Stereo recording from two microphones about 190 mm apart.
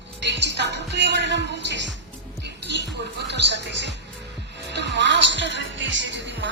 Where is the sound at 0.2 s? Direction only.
65° right (ahead or behind).